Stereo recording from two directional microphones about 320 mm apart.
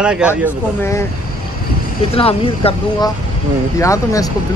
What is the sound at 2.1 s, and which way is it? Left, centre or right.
Speech, centre.